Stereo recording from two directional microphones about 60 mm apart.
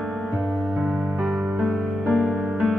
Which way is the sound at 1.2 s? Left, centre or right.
Centre.